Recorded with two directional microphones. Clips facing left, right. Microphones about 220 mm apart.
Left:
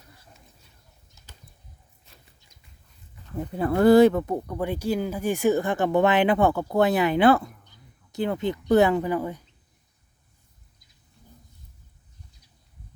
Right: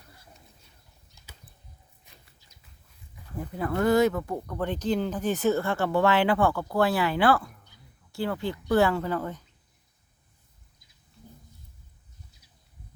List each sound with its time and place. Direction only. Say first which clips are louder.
2.1 s a sound: left 1 dB; 15° right (ahead or behind)
3.3 s speech: left 5 dB; 25° left (ahead or behind)
4.4 s speech: left 1 dB; 10° left (ahead or behind)